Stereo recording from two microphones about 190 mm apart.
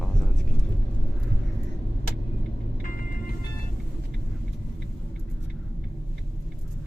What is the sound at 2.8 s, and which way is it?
Vehicle, 45° left (ahead or behind).